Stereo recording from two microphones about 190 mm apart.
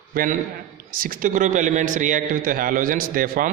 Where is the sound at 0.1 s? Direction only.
50° right (ahead or behind).